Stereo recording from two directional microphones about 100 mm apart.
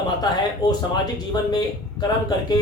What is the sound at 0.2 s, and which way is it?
Speech, 40° left (ahead or behind).